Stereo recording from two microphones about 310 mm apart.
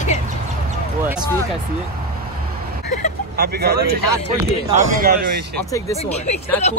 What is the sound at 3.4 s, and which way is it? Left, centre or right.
Speech, right.